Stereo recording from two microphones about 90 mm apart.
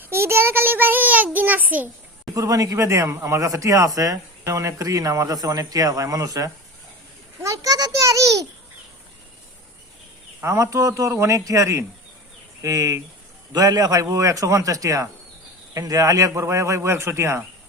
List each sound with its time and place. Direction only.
0.0 s child singing: 30° right (ahead or behind)
2.3 s speech: 40° right (ahead or behind)
7.4 s a sound: 40° right (ahead or behind)
10.4 s speech: 35° right (ahead or behind)